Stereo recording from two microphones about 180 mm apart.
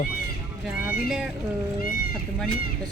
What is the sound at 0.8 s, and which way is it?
Speech, 5° right (ahead or behind).